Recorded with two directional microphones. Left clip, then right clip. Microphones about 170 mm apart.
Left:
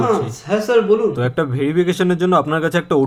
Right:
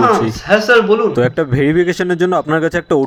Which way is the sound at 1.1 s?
30° right (ahead or behind).